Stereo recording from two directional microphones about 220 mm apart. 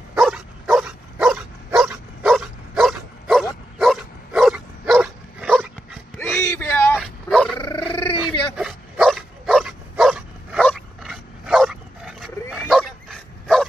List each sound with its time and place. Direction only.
0.1 s dog: centre (ahead or behind)
6.1 s a sound: 10° left (ahead or behind)
7.0 s dog: centre (ahead or behind)
7.5 s dog: 20° left (ahead or behind)
8.5 s dog: centre (ahead or behind)